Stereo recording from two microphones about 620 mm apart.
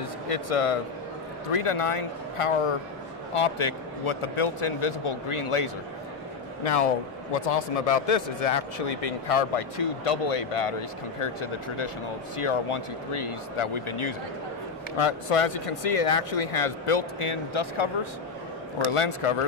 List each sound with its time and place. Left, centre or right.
0.3 s a man's voice: left
6.6 s a man's voice: left
18.9 s a man's voice: left